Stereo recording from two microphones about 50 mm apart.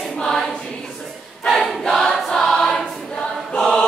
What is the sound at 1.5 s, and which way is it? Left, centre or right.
Choir, centre.